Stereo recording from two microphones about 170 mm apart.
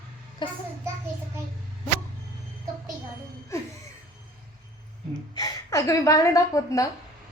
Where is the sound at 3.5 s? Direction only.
15° left (ahead or behind).